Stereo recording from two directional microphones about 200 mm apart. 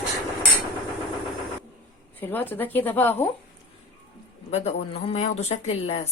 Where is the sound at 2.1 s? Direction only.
10° left (ahead or behind).